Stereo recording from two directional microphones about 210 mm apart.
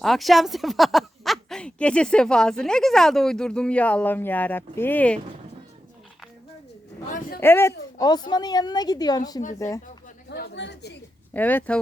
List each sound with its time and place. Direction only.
0.0 s speech: centre (ahead or behind)
7.1 s a sound: 40° left (ahead or behind)
7.3 s a woman's voice: 10° left (ahead or behind)
10.2 s speech: 50° left (ahead or behind)
11.3 s speech: 10° left (ahead or behind)